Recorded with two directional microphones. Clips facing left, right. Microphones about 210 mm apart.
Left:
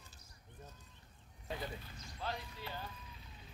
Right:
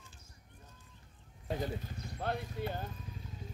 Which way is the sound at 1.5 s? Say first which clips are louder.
Right 7 dB; 45° right (ahead or behind).